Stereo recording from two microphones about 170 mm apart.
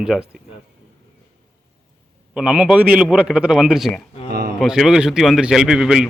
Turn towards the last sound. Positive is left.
turn(degrees=-5)  # may be behind; listen again after turning